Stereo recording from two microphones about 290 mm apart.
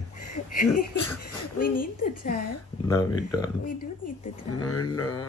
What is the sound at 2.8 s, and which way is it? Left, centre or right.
Speech, centre.